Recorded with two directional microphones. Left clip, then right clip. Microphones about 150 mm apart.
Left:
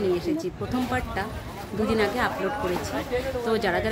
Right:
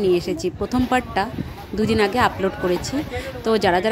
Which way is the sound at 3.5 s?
50° right (ahead or behind).